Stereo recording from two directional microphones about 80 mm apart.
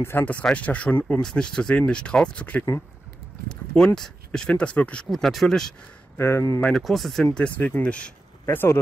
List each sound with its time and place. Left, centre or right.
0.0 s speech: left
1.2 s speech: centre
5.1 s speech: centre
6.1 s speech: left
6.7 s speech: centre
7.3 s speech: centre
8.5 s speech: left